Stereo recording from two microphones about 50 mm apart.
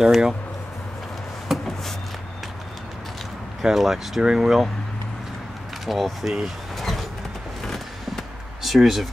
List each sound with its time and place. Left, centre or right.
0.0 s speech: centre
1.5 s a sound: centre
3.6 s speech: centre
5.9 s speech: centre
6.8 s vehicle: centre